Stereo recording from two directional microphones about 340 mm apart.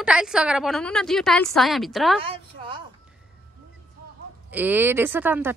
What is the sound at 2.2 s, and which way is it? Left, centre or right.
Speech, centre.